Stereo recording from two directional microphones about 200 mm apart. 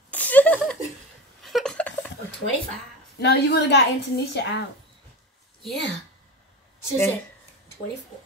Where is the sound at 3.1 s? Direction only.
55° left (ahead or behind).